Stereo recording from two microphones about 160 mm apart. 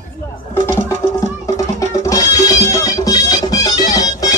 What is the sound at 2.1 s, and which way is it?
Music, 20° left (ahead or behind).